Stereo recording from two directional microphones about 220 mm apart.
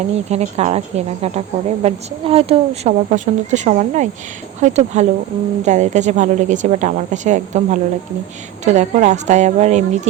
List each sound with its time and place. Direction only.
0.3 s a woman's voice: 30° right (ahead or behind)